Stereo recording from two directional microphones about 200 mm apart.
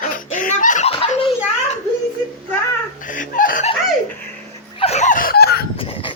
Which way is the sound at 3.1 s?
40° left (ahead or behind).